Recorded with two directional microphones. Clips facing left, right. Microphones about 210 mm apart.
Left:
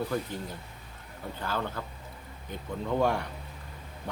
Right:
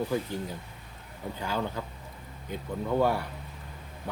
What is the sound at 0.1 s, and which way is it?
Speech, 10° right (ahead or behind).